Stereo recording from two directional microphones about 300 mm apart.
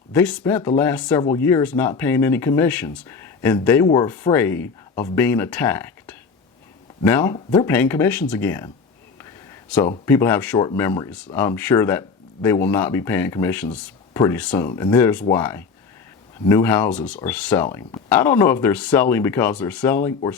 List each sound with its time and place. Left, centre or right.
0.1 s speech: centre
9.1 s a sound: centre
10.1 s speech: centre